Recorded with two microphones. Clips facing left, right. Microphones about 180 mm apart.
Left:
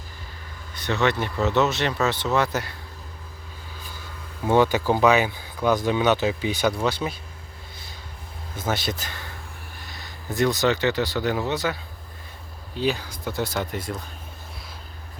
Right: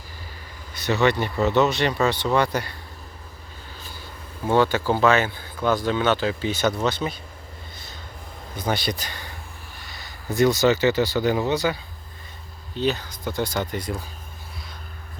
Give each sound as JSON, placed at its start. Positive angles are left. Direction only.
{"t": 0.9, "sound": "speech", "side_deg": 0}
{"t": 4.4, "sound": "speech", "side_deg": 15}
{"t": 8.5, "sound": "speech", "side_deg": 5}